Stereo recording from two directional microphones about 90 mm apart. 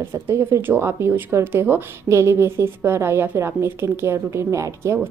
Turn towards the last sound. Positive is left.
turn(degrees=-30)  # may be behind; listen again after turning